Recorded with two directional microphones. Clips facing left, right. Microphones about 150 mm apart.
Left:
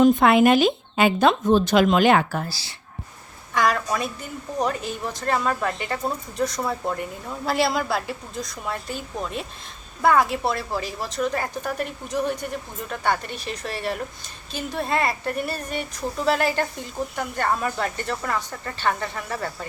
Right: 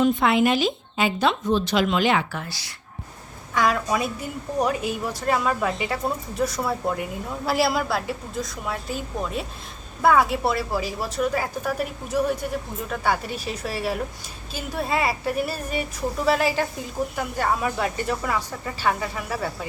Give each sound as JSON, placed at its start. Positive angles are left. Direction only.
{"t": 0.0, "sound": "speech", "side_deg": 50}
{"t": 3.5, "sound": "a woman's voice", "side_deg": 0}